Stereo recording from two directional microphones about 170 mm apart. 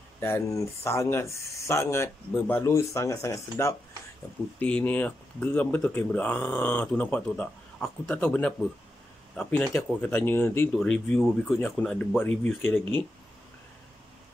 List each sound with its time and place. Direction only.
0.2 s speech: 15° left (ahead or behind)